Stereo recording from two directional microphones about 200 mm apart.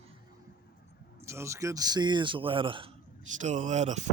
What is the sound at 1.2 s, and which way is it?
Speech, 15° right (ahead or behind).